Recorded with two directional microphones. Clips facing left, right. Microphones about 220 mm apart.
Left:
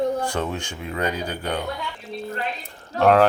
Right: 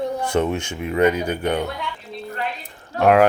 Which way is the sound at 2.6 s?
10° right (ahead or behind).